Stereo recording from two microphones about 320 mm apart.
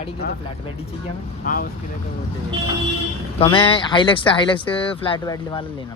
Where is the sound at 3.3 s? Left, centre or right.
Centre.